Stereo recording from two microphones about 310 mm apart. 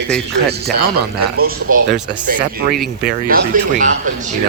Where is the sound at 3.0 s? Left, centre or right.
Right.